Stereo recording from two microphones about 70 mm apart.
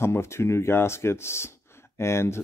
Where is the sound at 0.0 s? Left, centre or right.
Left.